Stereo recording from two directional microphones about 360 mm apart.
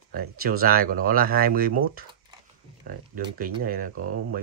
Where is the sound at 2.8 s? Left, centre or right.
Right.